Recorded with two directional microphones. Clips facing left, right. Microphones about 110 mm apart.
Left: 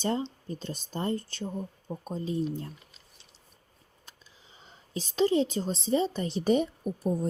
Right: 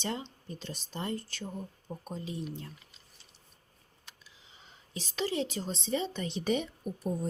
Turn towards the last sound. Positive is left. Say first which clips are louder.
# left 5 dB
turn(degrees=40)  # may be behind; listen again after turning